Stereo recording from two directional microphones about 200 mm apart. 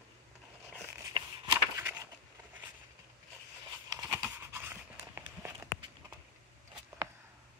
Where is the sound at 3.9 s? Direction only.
15° right (ahead or behind).